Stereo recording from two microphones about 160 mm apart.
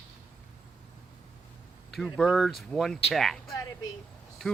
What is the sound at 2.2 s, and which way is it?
Speech, centre (ahead or behind).